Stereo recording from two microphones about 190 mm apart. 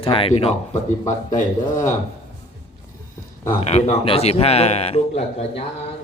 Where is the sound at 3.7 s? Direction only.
30° left (ahead or behind).